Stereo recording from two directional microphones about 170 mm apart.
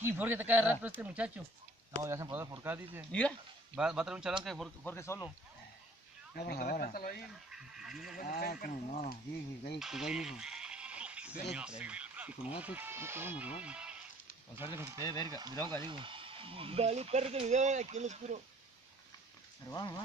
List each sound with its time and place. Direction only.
0.0 s speech: 10° right (ahead or behind)
3.1 s speech: 5° left (ahead or behind)
3.7 s speech: 5° right (ahead or behind)
4.8 s speech: 15° left (ahead or behind)
6.3 s speech: 65° left (ahead or behind)
7.5 s goat: 5° right (ahead or behind)
8.2 s speech: 60° left (ahead or behind)
9.8 s bleat: centre (ahead or behind)
11.5 s speech: 5° right (ahead or behind)
15.0 s speech: 20° left (ahead or behind)
15.2 s speech: 25° right (ahead or behind)
15.5 s speech: 15° left (ahead or behind)
15.8 s speech: 30° right (ahead or behind)
19.7 s speech: 20° left (ahead or behind)